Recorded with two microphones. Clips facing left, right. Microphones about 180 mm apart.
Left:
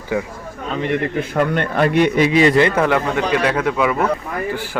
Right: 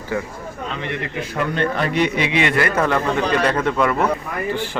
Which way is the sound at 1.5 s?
55° left (ahead or behind).